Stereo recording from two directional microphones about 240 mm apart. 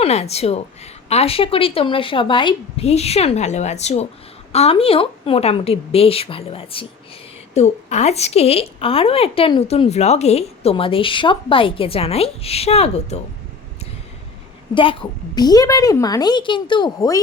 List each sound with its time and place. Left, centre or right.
0.0 s a woman's voice: left
14.8 s a woman's voice: left